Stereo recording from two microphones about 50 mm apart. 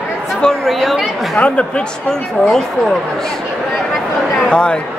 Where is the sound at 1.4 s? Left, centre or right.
Left.